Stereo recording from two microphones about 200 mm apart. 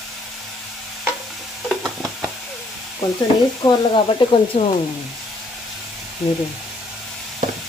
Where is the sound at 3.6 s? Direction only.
20° left (ahead or behind).